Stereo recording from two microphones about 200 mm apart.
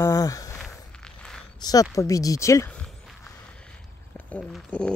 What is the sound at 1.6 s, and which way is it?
Speech, 20° left (ahead or behind).